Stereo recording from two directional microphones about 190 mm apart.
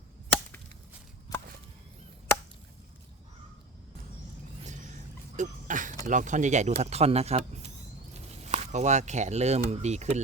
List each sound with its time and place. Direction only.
1.3 s chop: 20° left (ahead or behind)
4.6 s music: 40° right (ahead or behind)
5.4 s cough: 45° right (ahead or behind)
6.1 s speech: 40° right (ahead or behind)